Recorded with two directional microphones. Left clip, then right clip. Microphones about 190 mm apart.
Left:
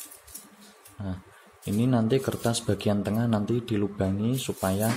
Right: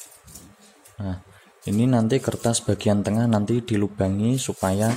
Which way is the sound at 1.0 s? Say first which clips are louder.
Right 4 dB; 10° right (ahead or behind).